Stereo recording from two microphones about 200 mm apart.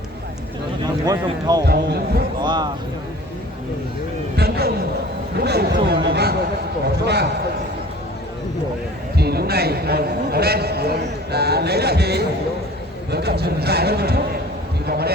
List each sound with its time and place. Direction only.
1.0 s speech: 20° right (ahead or behind)
1.6 s a man's voice: 50° right (ahead or behind)
2.4 s music: 20° right (ahead or behind)
4.4 s a sound: 50° right (ahead or behind)
7.0 s a man's voice: 55° right (ahead or behind)
9.1 s speech: 50° right (ahead or behind)